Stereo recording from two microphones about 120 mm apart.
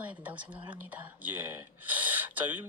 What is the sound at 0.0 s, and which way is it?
Speech, 10° right (ahead or behind).